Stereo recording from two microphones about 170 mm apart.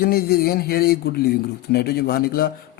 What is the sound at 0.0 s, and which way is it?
Speech, 65° left (ahead or behind).